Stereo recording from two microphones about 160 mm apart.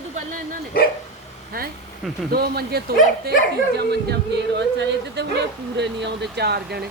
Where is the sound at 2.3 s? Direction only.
80° right.